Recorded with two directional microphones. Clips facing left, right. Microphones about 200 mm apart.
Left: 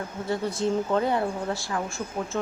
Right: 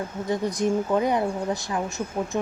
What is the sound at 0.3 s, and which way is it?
Speech, 15° right (ahead or behind).